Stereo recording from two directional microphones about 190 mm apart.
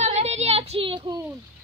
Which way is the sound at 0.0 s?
35° right (ahead or behind).